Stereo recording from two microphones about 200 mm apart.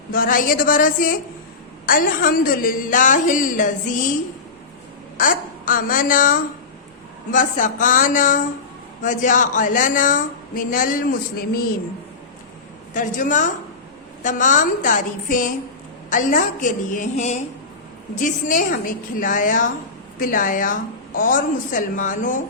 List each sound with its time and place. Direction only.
0.1 s a woman's voice: 45° left (ahead or behind)
5.1 s a woman's voice: 45° left (ahead or behind)
12.9 s a woman's voice: 40° left (ahead or behind)